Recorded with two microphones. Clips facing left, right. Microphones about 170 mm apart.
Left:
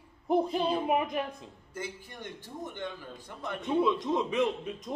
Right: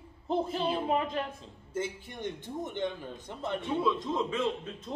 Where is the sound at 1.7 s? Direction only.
25° right (ahead or behind).